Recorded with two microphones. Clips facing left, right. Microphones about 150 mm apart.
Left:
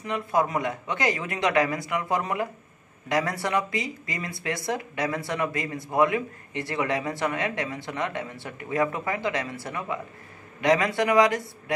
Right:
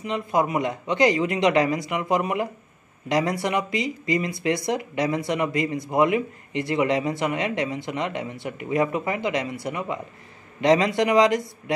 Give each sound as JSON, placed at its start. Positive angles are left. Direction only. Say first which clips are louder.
{"t": 0.0, "sound": "speech", "louder": "right 2 dB", "side_deg": -20}